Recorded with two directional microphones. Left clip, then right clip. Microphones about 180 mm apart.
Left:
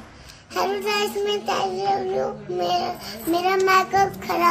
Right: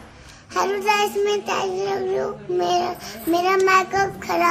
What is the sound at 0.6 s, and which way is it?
A child's voice, 10° right (ahead or behind).